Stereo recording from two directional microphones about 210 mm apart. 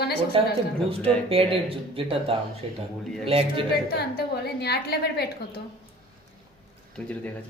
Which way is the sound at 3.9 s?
50° left (ahead or behind).